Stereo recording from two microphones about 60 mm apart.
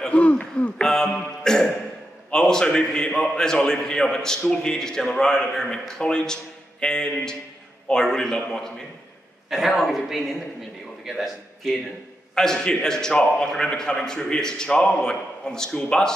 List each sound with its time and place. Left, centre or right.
0.1 s speech: left
0.8 s a sound: centre
2.3 s a man's voice: centre
9.8 s a woman's voice: centre
12.4 s a man's voice: centre